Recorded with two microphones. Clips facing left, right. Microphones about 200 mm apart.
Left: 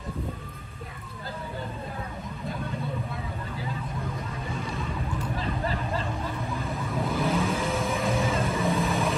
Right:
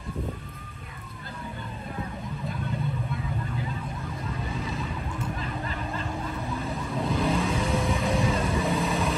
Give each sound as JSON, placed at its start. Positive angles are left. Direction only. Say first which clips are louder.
{"t": 4.6, "sound": "vehicle", "louder": "left 1 dB", "side_deg": 0}
{"t": 5.4, "sound": "vehicle", "louder": "left 3 dB", "side_deg": 35}
{"t": 6.6, "sound": "vehicle", "louder": "even", "side_deg": 0}